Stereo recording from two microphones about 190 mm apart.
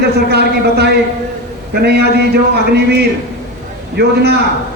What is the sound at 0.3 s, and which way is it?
A man's voice, 60° right (ahead or behind).